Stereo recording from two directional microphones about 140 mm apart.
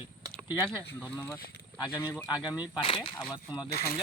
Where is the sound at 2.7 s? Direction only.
35° left (ahead or behind).